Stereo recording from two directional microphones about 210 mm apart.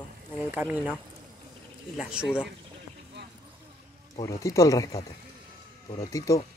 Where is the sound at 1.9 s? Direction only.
5° right (ahead or behind).